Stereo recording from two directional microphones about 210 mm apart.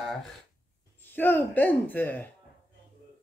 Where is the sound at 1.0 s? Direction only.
10° left (ahead or behind).